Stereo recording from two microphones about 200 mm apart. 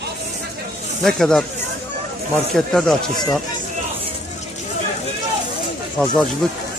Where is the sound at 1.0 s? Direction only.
5° left (ahead or behind).